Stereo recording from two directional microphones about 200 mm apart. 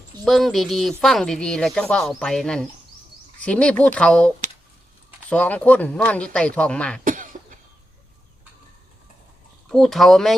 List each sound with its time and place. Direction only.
0.3 s speech: centre (ahead or behind)
5.3 s speech: 5° left (ahead or behind)
7.0 s cough: 45° right (ahead or behind)
9.6 s speech: centre (ahead or behind)